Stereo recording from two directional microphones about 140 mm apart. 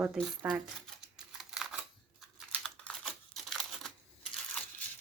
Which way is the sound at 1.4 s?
5° right (ahead or behind).